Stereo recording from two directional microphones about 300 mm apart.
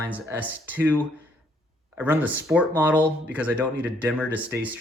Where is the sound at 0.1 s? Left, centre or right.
Centre.